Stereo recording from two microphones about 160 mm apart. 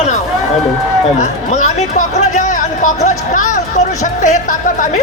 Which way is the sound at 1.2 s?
50° left (ahead or behind).